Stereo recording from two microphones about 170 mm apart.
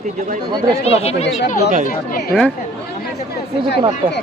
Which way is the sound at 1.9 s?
65° left (ahead or behind).